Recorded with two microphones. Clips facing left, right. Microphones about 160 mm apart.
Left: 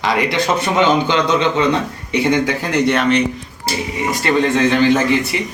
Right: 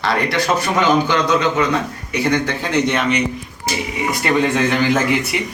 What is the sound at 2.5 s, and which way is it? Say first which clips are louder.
Speech: left 2 dB; centre (ahead or behind).